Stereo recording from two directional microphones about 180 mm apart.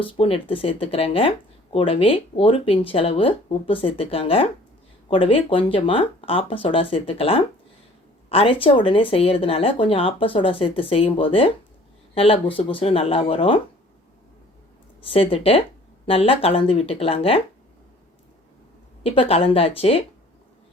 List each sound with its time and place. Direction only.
0.0 s a woman's voice: 30° left (ahead or behind)
15.1 s speech: 30° left (ahead or behind)
19.0 s speech: 30° left (ahead or behind)